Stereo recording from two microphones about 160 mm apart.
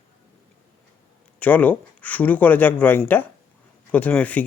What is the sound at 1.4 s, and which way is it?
Speech, 10° left (ahead or behind).